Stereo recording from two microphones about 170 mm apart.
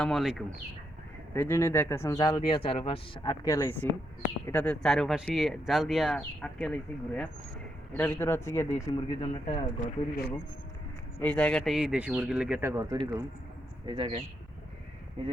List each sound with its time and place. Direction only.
0.0 s speech: centre (ahead or behind)
1.3 s speech: 15° left (ahead or behind); by 3.3 s 35° left (ahead or behind)
3.4 s speech: 20° left (ahead or behind)
9.8 s speech: 65° left (ahead or behind)
11.2 s speech: 10° left (ahead or behind); by 14.1 s 30° right (ahead or behind)